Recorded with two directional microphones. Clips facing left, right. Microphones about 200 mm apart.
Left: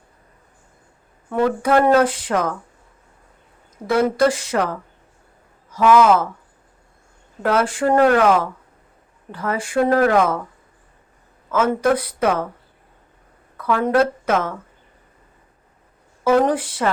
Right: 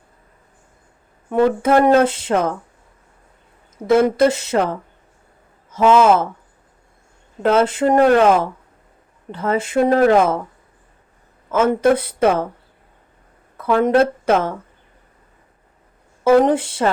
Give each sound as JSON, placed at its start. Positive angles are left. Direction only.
{"t": 1.3, "sound": "speech", "side_deg": -20}
{"t": 3.8, "sound": "speech", "side_deg": -25}
{"t": 7.4, "sound": "speech", "side_deg": -25}
{"t": 11.5, "sound": "speech", "side_deg": -25}
{"t": 13.6, "sound": "speech", "side_deg": -25}
{"t": 16.2, "sound": "speech", "side_deg": -25}